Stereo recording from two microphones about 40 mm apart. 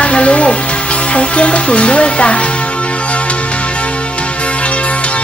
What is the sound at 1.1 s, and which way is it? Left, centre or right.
A woman's voice, left.